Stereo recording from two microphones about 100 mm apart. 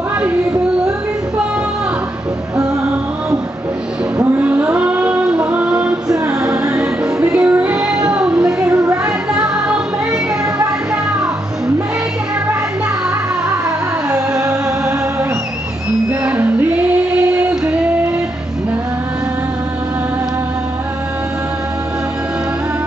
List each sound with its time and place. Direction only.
4.2 s a sound: 15° right (ahead or behind)
7.3 s music: 15° right (ahead or behind)
14.4 s music: 30° right (ahead or behind)
16.1 s music: 15° right (ahead or behind)